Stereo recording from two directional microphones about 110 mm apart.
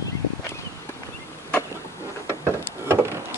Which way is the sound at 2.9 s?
20° right (ahead or behind).